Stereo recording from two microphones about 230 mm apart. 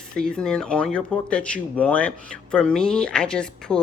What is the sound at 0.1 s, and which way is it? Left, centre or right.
Speech, centre.